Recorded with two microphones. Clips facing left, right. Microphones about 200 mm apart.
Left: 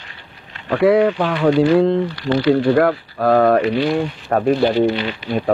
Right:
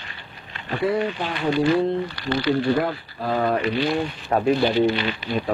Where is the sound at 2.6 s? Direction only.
65° left (ahead or behind).